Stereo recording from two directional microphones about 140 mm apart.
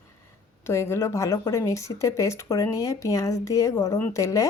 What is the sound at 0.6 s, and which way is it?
Speech, 20° left (ahead or behind).